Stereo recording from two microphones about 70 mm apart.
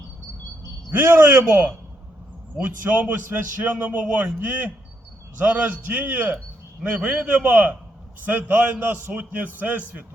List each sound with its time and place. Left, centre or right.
0.9 s a man's voice: right